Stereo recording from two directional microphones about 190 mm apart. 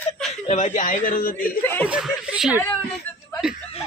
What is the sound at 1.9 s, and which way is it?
Speech, 5° right (ahead or behind).